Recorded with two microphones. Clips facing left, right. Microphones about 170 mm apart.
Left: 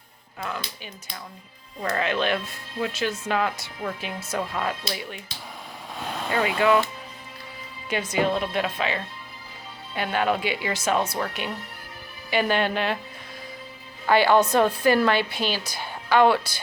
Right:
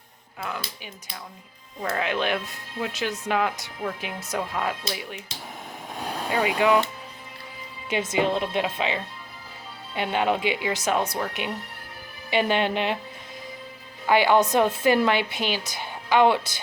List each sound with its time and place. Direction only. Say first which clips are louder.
0.3 s speech: left 1 dB; 10° right (ahead or behind)
7.9 s a woman's voice: even; 20° right (ahead or behind)
14.1 s a woman's voice: left 1 dB; 15° right (ahead or behind)